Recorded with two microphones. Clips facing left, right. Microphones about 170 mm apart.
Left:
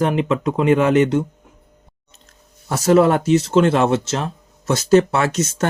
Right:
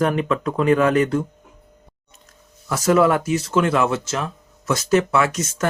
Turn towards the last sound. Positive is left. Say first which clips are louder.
# left 1 dB
turn(degrees=30)  # may be behind; listen again after turning